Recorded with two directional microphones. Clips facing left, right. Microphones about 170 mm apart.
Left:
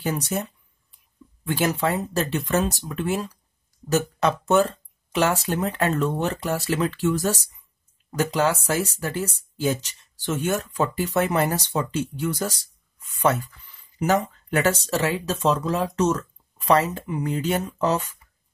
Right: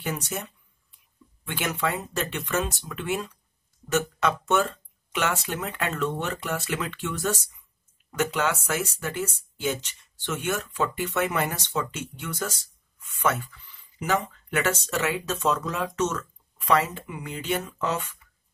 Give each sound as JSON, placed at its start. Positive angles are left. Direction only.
{"t": 0.0, "sound": "speech", "side_deg": 35}
{"t": 1.4, "sound": "speech", "side_deg": 35}